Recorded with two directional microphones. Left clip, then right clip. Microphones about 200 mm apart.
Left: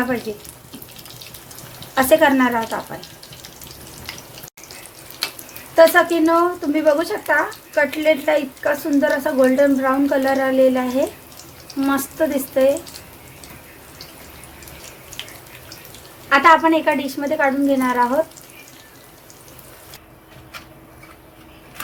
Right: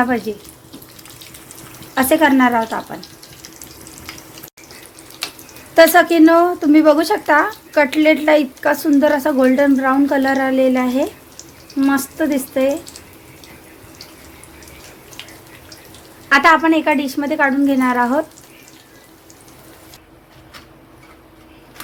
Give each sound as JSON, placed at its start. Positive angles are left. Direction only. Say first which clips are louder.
{"t": 2.0, "sound": "speech", "louder": "right 1 dB", "side_deg": -25}
{"t": 5.7, "sound": "speech", "louder": "right 3 dB", "side_deg": -45}
{"t": 16.3, "sound": "speech", "louder": "right 1 dB", "side_deg": -30}